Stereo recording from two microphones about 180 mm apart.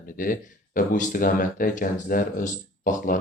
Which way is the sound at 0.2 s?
50° left (ahead or behind).